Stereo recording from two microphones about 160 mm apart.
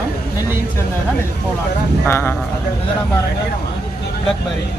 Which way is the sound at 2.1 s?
15° left (ahead or behind).